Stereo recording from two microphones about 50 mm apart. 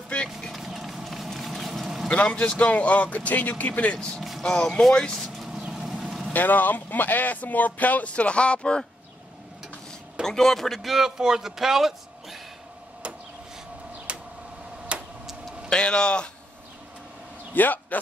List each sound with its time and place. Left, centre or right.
0.5 s run: centre
2.0 s speech: left
4.4 s speech: centre
5.7 s a sound: centre
6.3 s speech: left; by 8.8 s centre
10.2 s a man's voice: centre
14.1 s a sound: right
14.9 s tick-tock: right
15.7 s speech: centre
17.6 s speech: left